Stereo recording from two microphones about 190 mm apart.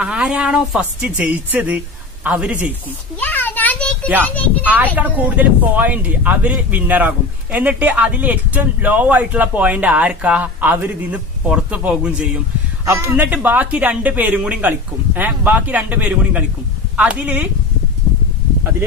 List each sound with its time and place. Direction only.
0.0 s speech: 5° right (ahead or behind)
3.2 s a sound: 10° left (ahead or behind)
4.2 s speech: 10° left (ahead or behind)
4.9 s speech: 10° right (ahead or behind)